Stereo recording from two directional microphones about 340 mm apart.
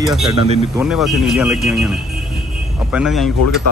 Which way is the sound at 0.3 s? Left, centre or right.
Centre.